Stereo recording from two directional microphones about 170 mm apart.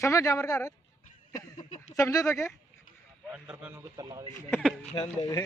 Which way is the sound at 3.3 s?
5° right (ahead or behind).